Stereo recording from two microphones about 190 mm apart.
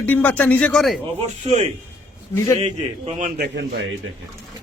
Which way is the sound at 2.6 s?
35° right (ahead or behind).